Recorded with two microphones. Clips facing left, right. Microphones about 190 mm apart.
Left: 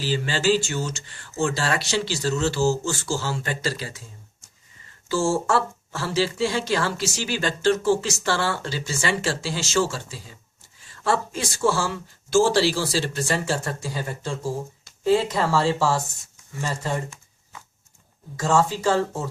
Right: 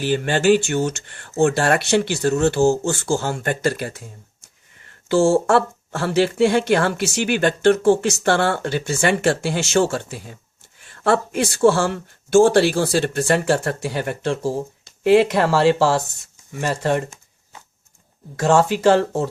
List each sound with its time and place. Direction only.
0.0 s speech: 55° right (ahead or behind)
18.3 s speech: 70° right (ahead or behind)